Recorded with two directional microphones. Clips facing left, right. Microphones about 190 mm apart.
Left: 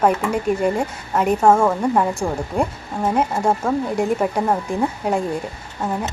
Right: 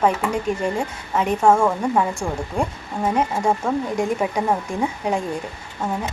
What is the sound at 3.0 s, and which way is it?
Speech, centre (ahead or behind).